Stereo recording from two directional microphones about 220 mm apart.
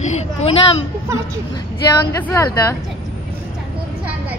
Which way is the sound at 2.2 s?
10° left (ahead or behind).